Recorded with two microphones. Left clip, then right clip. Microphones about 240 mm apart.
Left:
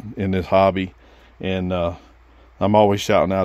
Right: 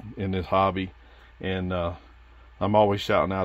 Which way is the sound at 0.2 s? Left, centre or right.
Left.